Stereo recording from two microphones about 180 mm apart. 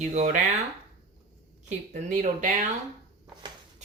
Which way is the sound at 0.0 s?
40° right (ahead or behind).